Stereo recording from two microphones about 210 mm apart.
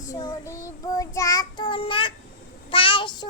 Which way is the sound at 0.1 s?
15° left (ahead or behind).